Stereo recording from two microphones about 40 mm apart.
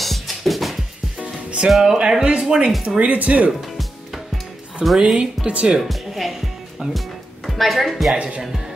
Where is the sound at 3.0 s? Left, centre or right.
Right.